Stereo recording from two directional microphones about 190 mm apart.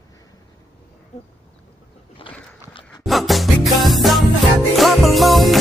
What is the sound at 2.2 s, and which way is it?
Dog, 30° left (ahead or behind).